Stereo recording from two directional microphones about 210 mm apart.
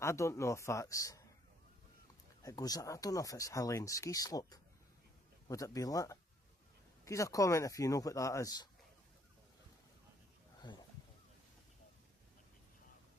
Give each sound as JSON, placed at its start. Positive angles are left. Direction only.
{"t": 0.0, "sound": "speech", "side_deg": 15}
{"t": 2.4, "sound": "speech", "side_deg": 15}
{"t": 10.6, "sound": "a sound", "side_deg": 20}